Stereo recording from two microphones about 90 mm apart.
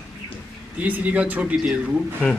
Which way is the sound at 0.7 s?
20° right (ahead or behind).